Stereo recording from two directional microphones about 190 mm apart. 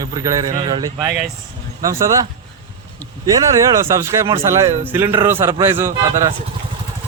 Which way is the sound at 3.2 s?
20° right (ahead or behind).